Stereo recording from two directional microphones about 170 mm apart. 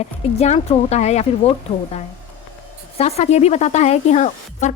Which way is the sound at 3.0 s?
40° left (ahead or behind).